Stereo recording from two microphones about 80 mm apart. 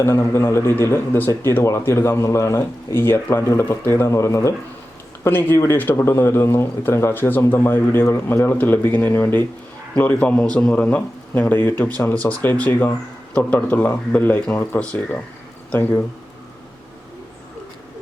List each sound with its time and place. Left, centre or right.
0.0 s speech: left
5.2 s speech: left